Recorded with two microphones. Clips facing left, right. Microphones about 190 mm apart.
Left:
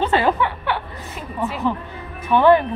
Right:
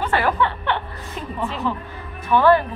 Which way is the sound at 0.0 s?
20° left (ahead or behind).